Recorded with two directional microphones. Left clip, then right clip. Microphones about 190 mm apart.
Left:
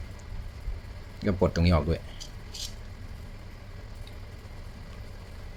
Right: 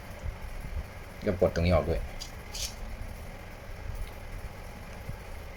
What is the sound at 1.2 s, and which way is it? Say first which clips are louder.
Speech: even; 30° left (ahead or behind).